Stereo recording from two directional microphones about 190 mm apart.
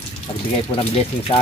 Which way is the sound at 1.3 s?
30° left (ahead or behind).